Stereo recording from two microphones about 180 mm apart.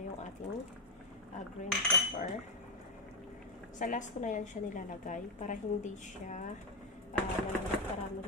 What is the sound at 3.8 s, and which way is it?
A woman's voice, 45° left (ahead or behind).